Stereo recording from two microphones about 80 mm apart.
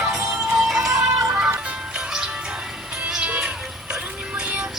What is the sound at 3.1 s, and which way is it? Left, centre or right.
Music, centre.